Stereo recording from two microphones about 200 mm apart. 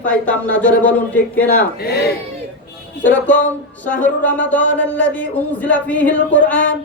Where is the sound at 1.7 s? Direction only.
55° left (ahead or behind).